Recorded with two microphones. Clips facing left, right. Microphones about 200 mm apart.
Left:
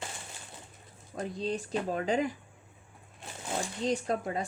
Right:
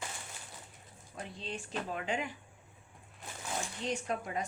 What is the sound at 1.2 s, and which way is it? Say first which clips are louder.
Speech: left 9 dB; 40° left (ahead or behind).